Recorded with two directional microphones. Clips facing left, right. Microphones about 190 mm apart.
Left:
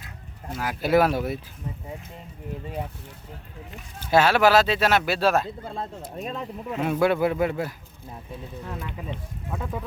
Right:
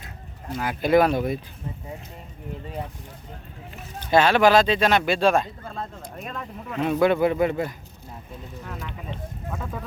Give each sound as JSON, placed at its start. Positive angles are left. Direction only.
{"t": 0.5, "sound": "speech", "side_deg": 5}
{"t": 4.1, "sound": "speech", "side_deg": 5}
{"t": 5.6, "sound": "speech", "side_deg": 25}
{"t": 6.7, "sound": "speech", "side_deg": 10}
{"t": 8.9, "sound": "speech", "side_deg": 15}